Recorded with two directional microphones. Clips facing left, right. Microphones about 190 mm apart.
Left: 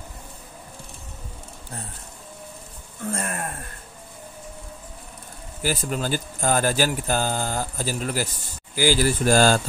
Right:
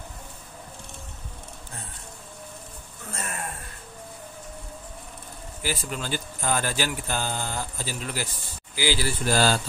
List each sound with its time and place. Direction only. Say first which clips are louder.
3.1 s speech: left 7 dB; 50° left (ahead or behind)
5.6 s speech: left 5 dB; 45° left (ahead or behind)